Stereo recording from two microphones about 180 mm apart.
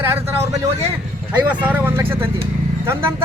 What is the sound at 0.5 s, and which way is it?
A man's voice, 15° right (ahead or behind).